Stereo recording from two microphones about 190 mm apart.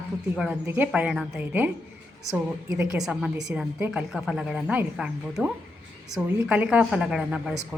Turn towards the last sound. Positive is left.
turn(degrees=-5)  # may be behind; listen again after turning